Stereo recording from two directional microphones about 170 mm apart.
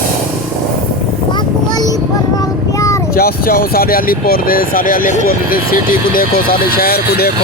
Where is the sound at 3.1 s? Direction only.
60° left (ahead or behind).